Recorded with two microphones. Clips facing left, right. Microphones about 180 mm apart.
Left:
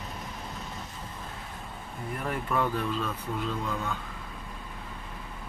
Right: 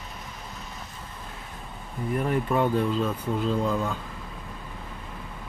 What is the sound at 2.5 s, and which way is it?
Speech, 25° right (ahead or behind).